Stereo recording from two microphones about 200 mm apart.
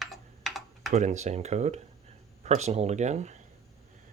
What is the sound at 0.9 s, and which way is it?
Speech, 35° right (ahead or behind).